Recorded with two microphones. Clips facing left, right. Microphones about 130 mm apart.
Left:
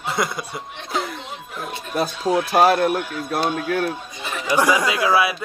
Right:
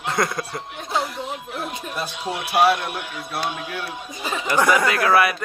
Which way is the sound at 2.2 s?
40° left (ahead or behind).